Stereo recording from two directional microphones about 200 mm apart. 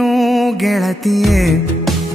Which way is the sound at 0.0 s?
Centre (ahead or behind).